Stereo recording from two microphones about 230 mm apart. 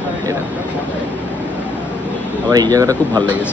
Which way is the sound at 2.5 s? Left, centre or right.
Centre.